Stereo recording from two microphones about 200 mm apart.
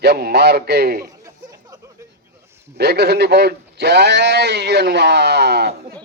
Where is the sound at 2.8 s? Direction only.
55° right (ahead or behind).